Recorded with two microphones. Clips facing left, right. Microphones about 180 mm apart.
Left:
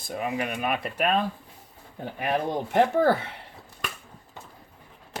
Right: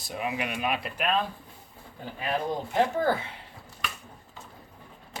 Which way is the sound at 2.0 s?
60° left (ahead or behind).